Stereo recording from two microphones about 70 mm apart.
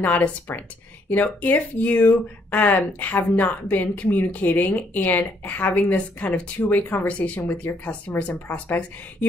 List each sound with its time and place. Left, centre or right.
0.0 s speech: left